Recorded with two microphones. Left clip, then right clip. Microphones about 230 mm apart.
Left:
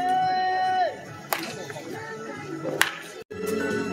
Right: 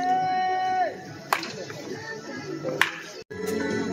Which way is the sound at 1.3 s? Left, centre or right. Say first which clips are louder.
Right 3 dB; left.